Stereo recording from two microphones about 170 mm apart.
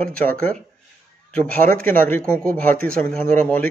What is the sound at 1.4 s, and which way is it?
Speech, 10° left (ahead or behind).